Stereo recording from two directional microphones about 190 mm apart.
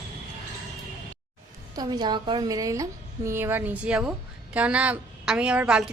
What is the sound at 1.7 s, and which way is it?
A woman's voice, 20° right (ahead or behind).